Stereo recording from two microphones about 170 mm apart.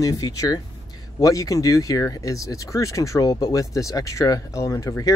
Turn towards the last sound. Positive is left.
turn(degrees=20)  # may be behind; listen again after turning